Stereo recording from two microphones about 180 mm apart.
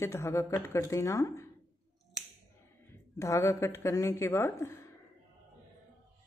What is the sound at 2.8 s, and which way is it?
Speech, 15° left (ahead or behind).